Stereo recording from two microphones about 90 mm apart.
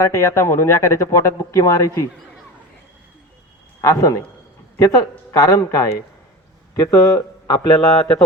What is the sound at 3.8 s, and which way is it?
A man's voice, 40° left (ahead or behind).